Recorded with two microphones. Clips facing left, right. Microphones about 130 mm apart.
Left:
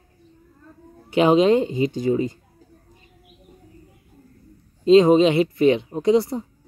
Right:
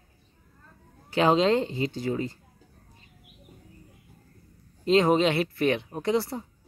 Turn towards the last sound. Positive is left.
turn(degrees=15)  # may be behind; listen again after turning